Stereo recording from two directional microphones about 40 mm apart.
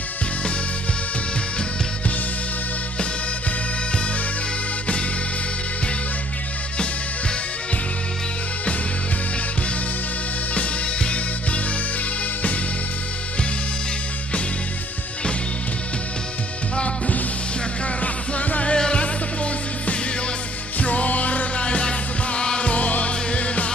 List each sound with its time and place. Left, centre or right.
10.5 s music: left
16.7 s music: left
18.8 s music: left
20.8 s music: left